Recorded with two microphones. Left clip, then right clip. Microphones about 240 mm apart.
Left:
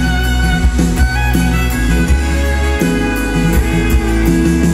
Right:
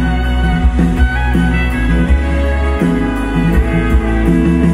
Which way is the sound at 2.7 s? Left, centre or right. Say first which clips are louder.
Left 1 dB; left.